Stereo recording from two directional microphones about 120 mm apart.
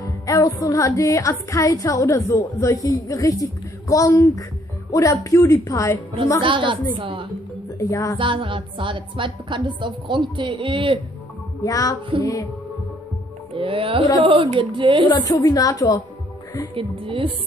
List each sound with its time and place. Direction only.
0.0 s music: 30° left (ahead or behind)
6.4 s a woman's voice: 45° right (ahead or behind)
7.8 s music: 25° left (ahead or behind)
8.2 s a woman's voice: 45° right (ahead or behind)
11.6 s music: 30° left (ahead or behind)
13.6 s a woman's voice: 50° right (ahead or behind)
15.0 s a woman's voice: 35° left (ahead or behind)
16.7 s a woman's voice: 50° right (ahead or behind)